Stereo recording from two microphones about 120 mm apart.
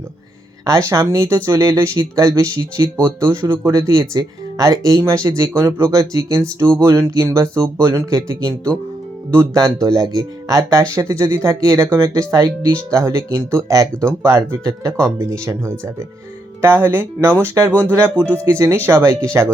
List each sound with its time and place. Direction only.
0.6 s speech: 25° right (ahead or behind)